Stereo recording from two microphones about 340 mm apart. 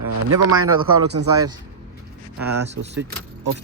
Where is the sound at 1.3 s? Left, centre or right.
Centre.